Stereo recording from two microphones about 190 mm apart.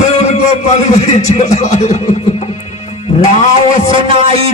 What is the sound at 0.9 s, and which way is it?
Speech, 35° left (ahead or behind).